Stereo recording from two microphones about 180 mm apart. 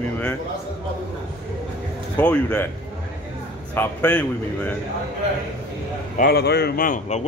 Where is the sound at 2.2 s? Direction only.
10° left (ahead or behind).